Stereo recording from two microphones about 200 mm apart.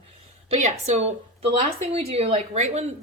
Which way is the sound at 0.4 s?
30° right (ahead or behind).